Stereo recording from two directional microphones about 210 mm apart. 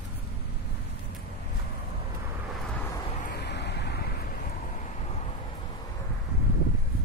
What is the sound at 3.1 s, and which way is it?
Vehicle, 45° left (ahead or behind).